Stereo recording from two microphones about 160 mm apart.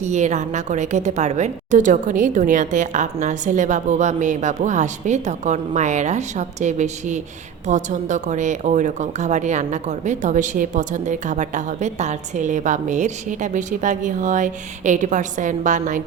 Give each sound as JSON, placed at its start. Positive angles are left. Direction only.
{"t": 0.0, "sound": "speech", "side_deg": -45}